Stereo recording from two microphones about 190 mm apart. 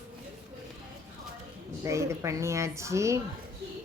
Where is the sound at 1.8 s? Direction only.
15° right (ahead or behind).